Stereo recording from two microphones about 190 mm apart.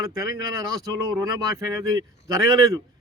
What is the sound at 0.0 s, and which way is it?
Speech, 15° right (ahead or behind).